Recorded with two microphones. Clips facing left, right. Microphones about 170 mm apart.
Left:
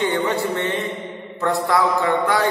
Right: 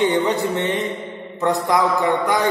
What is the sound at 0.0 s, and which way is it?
A man's voice, 15° right (ahead or behind).